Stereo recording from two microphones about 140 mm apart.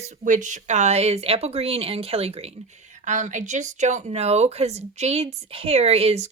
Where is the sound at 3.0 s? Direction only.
60° right (ahead or behind).